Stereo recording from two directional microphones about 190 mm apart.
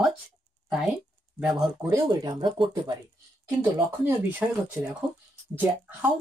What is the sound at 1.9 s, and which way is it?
Speech, 20° right (ahead or behind).